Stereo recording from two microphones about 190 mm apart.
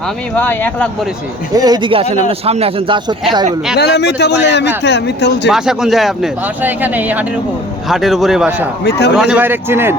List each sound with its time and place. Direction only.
0.3 s speech: 10° left (ahead or behind)
1.5 s a man's voice: 20° right (ahead or behind)
3.8 s a man's voice: 60° left (ahead or behind)
5.5 s speech: 5° right (ahead or behind)
8.8 s a man's voice: 60° left (ahead or behind)
9.1 s speech: 5° right (ahead or behind)